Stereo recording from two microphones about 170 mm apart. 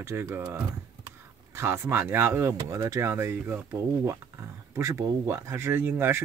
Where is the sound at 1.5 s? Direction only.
15° right (ahead or behind).